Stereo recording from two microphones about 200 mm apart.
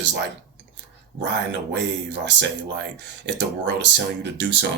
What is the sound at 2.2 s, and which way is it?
Speech, 60° right (ahead or behind).